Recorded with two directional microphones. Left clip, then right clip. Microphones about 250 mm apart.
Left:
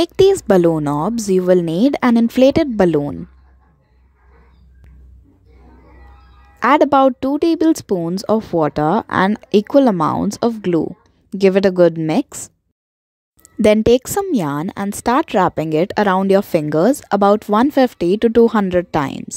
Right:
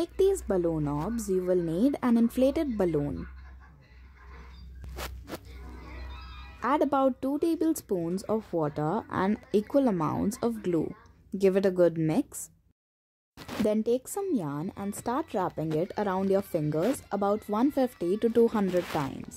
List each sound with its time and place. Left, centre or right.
0.0 s speech: left
4.8 s a sound: centre
6.6 s speech: left
13.7 s speech: left